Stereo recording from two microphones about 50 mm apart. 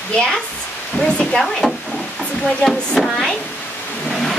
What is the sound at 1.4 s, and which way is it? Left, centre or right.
Speech, centre.